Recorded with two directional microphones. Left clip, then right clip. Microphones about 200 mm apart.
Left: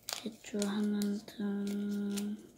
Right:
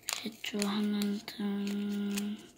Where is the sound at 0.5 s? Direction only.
25° right (ahead or behind).